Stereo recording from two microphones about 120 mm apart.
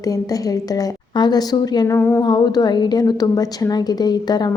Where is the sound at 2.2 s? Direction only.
35° left (ahead or behind).